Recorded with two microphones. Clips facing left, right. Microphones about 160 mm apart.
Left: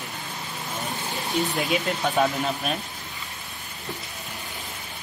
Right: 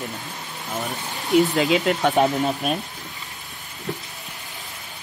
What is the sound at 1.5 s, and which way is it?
Speech, 75° right (ahead or behind).